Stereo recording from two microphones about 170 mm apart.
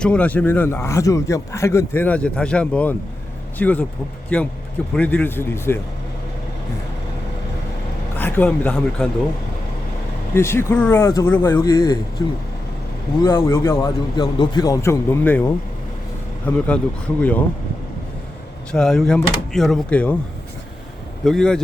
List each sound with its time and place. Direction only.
0.0 s a man's voice: 5° left (ahead or behind)
4.9 s a man's voice: 10° left (ahead or behind)
8.1 s speech: 10° left (ahead or behind)
10.3 s a man's voice: 15° left (ahead or behind)
13.2 s a man's voice: 15° left (ahead or behind)
18.7 s speech: 5° left (ahead or behind)
21.2 s speech: 5° left (ahead or behind)